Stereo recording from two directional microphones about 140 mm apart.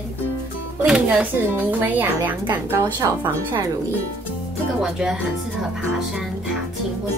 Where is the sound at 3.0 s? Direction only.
25° right (ahead or behind).